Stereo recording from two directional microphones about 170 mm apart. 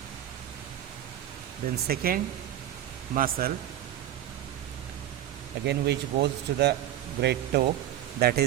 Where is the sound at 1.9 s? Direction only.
60° right (ahead or behind).